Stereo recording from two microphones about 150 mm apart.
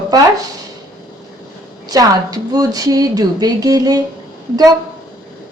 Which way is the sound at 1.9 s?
25° right (ahead or behind).